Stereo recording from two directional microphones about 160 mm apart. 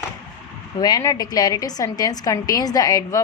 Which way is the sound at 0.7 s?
25° left (ahead or behind).